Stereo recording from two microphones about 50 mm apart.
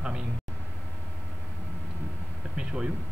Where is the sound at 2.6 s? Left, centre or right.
Centre.